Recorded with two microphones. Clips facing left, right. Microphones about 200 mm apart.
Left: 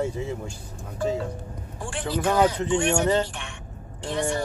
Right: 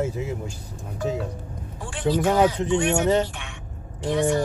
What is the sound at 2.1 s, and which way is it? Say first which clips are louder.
Speech: right 2 dB; 15° right (ahead or behind).